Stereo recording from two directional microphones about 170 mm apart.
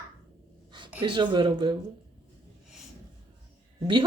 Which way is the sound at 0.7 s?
30° right (ahead or behind).